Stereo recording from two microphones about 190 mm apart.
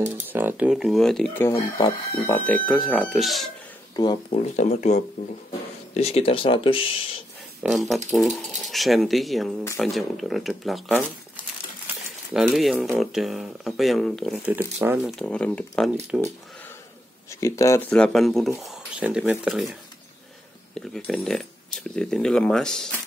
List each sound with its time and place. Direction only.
0.3 s speech: 10° right (ahead or behind); by 1.6 s 10° left (ahead or behind)
1.8 s speech: 30° left (ahead or behind)
2.2 s speech: 10° left (ahead or behind)
3.9 s speech: 25° left (ahead or behind)
7.6 s speech: centre (ahead or behind)
12.3 s speech: 5° right (ahead or behind)
15.0 s speech: 5° left (ahead or behind)
16.1 s speech: 5° right (ahead or behind)
17.3 s speech: 15° left (ahead or behind)